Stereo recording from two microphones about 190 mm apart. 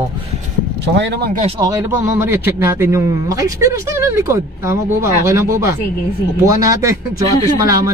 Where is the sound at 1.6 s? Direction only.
15° right (ahead or behind).